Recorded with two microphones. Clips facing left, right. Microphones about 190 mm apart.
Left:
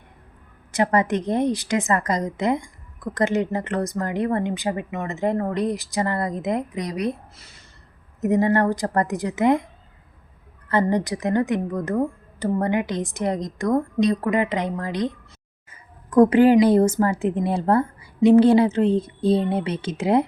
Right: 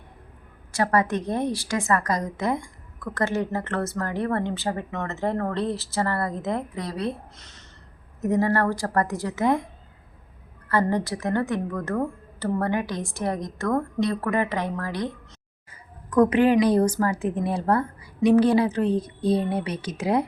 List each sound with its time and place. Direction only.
0.7 s a woman's voice: 20° left (ahead or behind)
8.2 s a woman's voice: 20° left (ahead or behind)
10.7 s a woman's voice: 20° left (ahead or behind)
16.0 s a woman's voice: 30° left (ahead or behind)